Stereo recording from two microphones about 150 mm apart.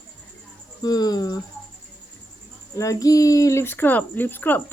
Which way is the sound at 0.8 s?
25° left (ahead or behind).